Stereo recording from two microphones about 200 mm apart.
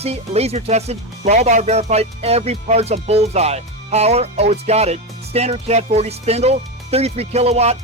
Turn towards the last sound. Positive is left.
turn(degrees=-30)  # may be behind; listen again after turning